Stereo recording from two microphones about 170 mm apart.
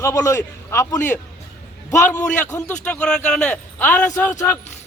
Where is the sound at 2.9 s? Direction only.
5° left (ahead or behind).